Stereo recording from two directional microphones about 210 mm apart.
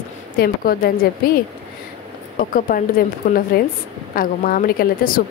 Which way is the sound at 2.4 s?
40° left (ahead or behind).